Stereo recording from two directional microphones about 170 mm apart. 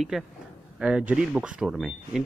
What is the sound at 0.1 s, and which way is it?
Speech, centre (ahead or behind).